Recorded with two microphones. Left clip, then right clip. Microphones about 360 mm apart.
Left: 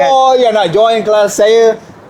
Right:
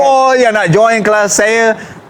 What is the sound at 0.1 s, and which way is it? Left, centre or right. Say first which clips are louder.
Speech: even; right.